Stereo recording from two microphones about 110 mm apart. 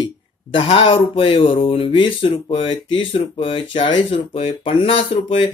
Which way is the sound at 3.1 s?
55° left (ahead or behind).